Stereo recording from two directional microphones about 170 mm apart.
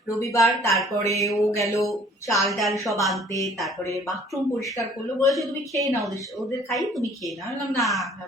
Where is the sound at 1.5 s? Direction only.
20° left (ahead or behind).